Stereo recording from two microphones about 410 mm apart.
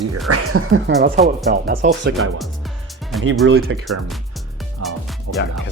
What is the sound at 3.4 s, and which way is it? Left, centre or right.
Speech, right.